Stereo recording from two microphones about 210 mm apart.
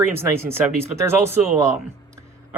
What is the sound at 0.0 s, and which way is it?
Speech, 10° right (ahead or behind).